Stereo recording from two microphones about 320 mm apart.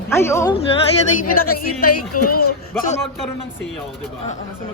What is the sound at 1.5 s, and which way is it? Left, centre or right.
Speech, left.